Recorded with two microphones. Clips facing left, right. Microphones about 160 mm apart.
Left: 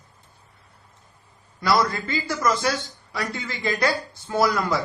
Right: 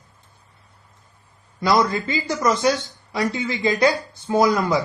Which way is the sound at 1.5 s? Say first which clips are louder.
Right 3 dB; 20° right (ahead or behind).